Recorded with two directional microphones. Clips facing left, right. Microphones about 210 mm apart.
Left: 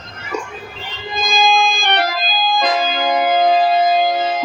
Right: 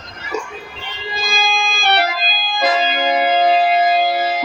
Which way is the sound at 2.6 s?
10° right (ahead or behind).